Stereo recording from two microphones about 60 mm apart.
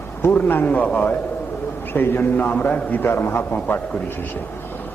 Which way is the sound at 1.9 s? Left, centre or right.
Left.